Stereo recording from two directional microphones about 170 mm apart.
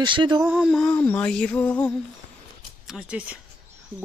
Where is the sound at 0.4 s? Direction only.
Centre (ahead or behind).